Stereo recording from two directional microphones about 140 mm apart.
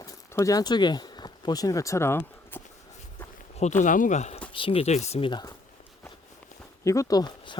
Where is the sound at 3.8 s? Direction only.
70° left (ahead or behind).